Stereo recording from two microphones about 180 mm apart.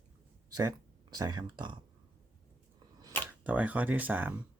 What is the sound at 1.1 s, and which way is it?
Speech, 20° right (ahead or behind).